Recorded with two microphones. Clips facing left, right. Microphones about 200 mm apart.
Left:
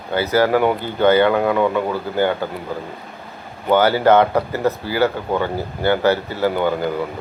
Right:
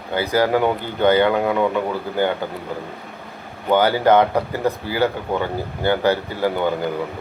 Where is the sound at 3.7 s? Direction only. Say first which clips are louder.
Left 1 dB; 15° right (ahead or behind).